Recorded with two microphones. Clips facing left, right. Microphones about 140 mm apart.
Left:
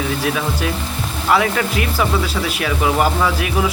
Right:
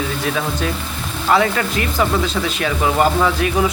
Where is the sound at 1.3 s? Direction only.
5° left (ahead or behind).